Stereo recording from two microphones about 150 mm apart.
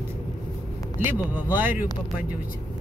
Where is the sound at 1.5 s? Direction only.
10° right (ahead or behind).